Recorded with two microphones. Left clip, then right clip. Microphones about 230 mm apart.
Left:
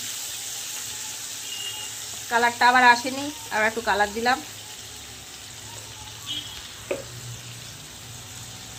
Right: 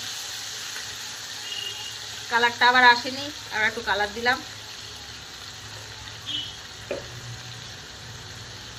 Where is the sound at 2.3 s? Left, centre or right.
Left.